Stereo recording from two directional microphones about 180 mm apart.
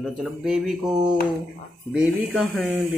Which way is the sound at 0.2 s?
Centre (ahead or behind).